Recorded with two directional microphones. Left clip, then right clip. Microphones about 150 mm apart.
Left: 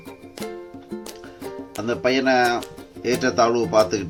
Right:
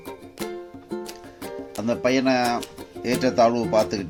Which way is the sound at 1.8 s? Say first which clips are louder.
Left 2 dB; 60° right (ahead or behind).